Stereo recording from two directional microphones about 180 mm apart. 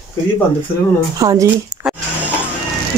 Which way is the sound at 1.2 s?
20° right (ahead or behind).